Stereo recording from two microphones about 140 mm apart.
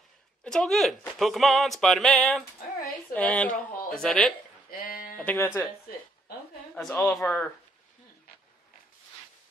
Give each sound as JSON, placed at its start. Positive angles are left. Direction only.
{"t": 0.4, "sound": "a woman's voice", "side_deg": 5}
{"t": 4.6, "sound": "a sound", "side_deg": 90}
{"t": 5.2, "sound": "a woman's voice", "side_deg": 15}
{"t": 6.7, "sound": "a woman's voice", "side_deg": 10}